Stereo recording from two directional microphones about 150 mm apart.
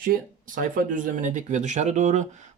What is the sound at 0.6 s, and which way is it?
Speech, 65° right (ahead or behind).